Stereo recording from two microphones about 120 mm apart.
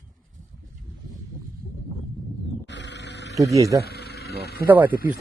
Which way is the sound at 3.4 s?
25° right (ahead or behind).